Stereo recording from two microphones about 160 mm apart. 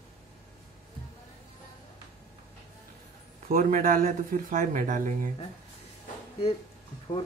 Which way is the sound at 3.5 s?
60° right (ahead or behind).